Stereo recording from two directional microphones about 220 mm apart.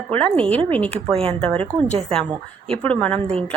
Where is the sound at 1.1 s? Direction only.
25° right (ahead or behind).